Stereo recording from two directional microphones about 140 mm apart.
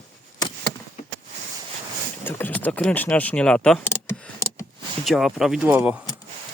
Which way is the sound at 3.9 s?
20° left (ahead or behind).